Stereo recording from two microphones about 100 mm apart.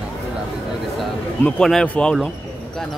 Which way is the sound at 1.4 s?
10° left (ahead or behind).